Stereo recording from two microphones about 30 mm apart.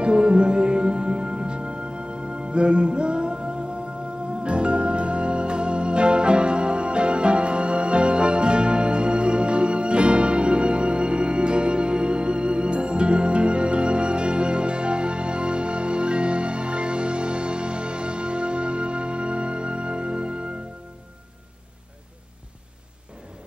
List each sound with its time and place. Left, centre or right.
0.0 s music: right
4.4 s organ: right